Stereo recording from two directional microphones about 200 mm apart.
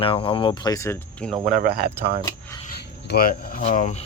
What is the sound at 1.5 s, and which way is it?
Speech, 50° right (ahead or behind).